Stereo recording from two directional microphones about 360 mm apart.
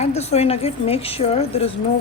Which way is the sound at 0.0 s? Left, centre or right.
Centre.